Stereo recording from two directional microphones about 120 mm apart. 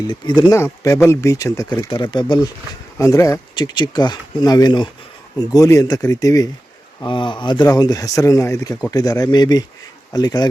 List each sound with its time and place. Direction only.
0.1 s speech: 40° left (ahead or behind)
0.5 s speech: 25° left (ahead or behind)
1.9 s speech: 40° left (ahead or behind)
3.0 s speech: 25° left (ahead or behind)
7.0 s speech: 40° left (ahead or behind)